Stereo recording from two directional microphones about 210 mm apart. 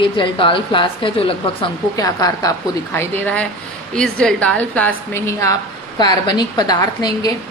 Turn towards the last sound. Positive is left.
turn(degrees=15)  # may be behind; listen again after turning